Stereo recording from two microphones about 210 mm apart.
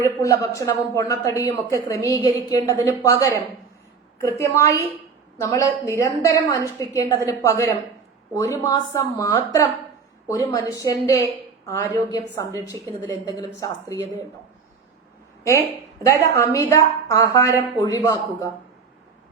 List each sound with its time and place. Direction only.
0.0 s speech: 15° left (ahead or behind)
4.4 s speech: 15° left (ahead or behind)
16.0 s speech: 15° left (ahead or behind)